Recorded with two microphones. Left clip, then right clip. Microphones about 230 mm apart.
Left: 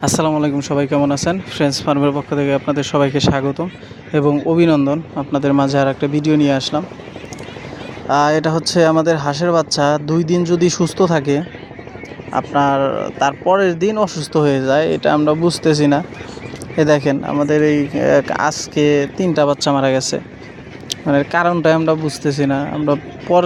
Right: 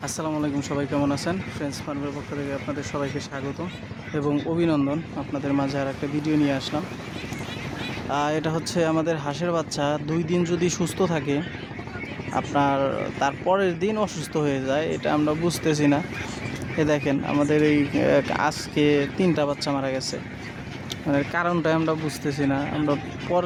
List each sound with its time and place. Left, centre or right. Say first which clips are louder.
0.0 s speech: left 11 dB; left
8.1 s speech: left 11 dB; left
10.3 s speech: left 9 dB; centre
10.9 s speech: left 9 dB; centre
19.4 s speech: left 10 dB; left